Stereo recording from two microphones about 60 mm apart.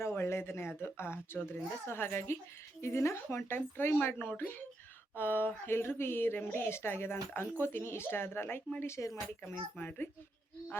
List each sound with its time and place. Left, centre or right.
0.0 s a woman's voice: left
8.8 s a woman's voice: left
9.4 s speech: left